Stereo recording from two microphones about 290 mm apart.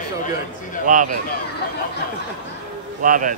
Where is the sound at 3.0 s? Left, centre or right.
Right.